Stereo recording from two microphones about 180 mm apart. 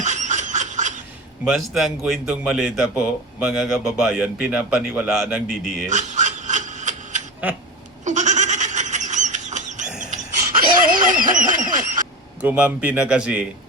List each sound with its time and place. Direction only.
0.0 s snicker: 40° right (ahead or behind)
1.5 s a man's voice: centre (ahead or behind)
5.9 s a sound: 40° right (ahead or behind)
7.4 s a man's voice: 10° right (ahead or behind)
8.0 s goat: 40° right (ahead or behind)
10.8 s a sound: 50° right (ahead or behind)
12.4 s a man's voice: 10° right (ahead or behind)